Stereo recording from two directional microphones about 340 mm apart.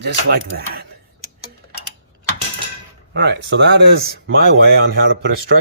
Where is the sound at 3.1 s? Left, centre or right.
Right.